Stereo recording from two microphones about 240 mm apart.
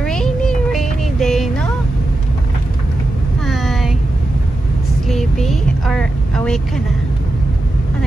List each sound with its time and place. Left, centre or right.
0.0 s music: centre
3.4 s a sound: centre
5.0 s vehicle: centre